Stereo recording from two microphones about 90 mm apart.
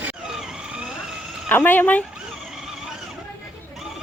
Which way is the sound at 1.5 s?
20° left (ahead or behind).